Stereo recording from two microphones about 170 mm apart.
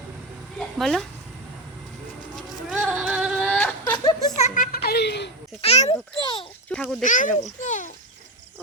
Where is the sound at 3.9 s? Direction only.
30° left (ahead or behind).